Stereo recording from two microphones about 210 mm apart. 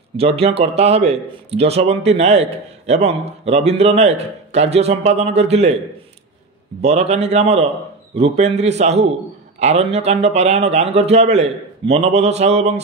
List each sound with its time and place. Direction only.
0.2 s a man's voice: 30° right (ahead or behind)
6.8 s a man's voice: 30° right (ahead or behind)